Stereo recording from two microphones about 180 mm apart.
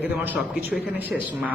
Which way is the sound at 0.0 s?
10° right (ahead or behind).